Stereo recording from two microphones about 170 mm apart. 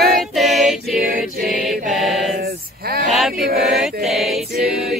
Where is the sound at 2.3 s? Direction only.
65° right (ahead or behind).